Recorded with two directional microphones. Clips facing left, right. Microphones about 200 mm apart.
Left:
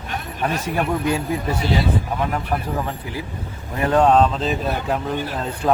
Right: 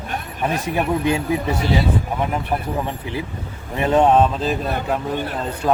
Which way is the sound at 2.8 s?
25° right (ahead or behind).